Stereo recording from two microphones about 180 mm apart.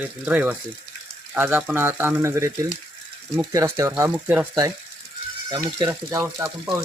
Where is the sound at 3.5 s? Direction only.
15° right (ahead or behind).